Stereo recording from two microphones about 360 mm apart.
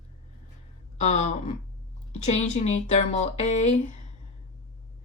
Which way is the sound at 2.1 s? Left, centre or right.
Centre.